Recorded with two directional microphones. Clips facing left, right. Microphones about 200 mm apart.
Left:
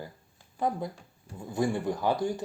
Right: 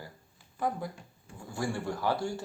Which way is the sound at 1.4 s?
20° left (ahead or behind).